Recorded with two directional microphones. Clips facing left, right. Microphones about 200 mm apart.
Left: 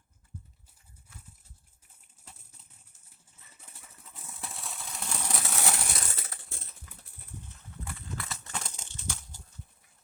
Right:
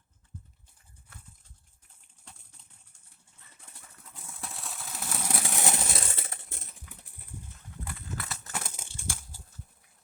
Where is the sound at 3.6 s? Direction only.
5° left (ahead or behind).